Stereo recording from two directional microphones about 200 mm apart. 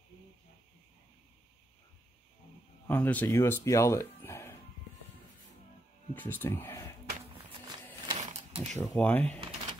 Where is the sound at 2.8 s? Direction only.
10° left (ahead or behind).